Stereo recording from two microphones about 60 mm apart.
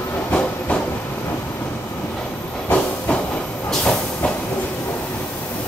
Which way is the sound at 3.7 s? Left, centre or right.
Centre.